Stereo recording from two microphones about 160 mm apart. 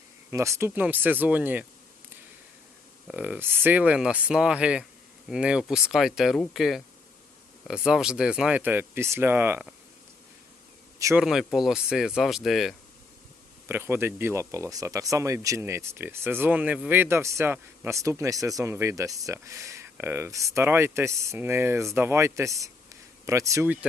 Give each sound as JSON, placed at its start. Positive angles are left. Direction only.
{"t": 0.3, "sound": "speech", "side_deg": -20}
{"t": 3.1, "sound": "speech", "side_deg": -10}
{"t": 11.2, "sound": "speech", "side_deg": 0}
{"t": 13.7, "sound": "speech", "side_deg": -15}